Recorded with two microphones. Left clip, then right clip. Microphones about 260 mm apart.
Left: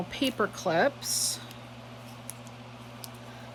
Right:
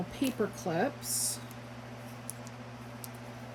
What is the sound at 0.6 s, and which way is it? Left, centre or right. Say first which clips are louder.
Speech: left 8 dB; left.